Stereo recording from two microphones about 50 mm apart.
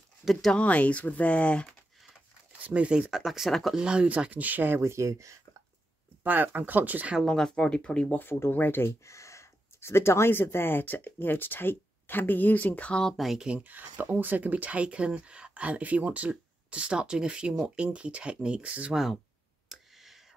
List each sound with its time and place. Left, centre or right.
0.6 s speech: left
2.6 s speech: right; by 3.7 s centre
3.7 s speech: centre
4.3 s speech: right
4.7 s speech: right
6.2 s speech: right
7.2 s speech: centre
8.1 s speech: left
9.0 s gasp: left
10.3 s speech: left
13.1 s speech: centre
13.4 s speech: centre
13.7 s speech: right
19.7 s a sound: centre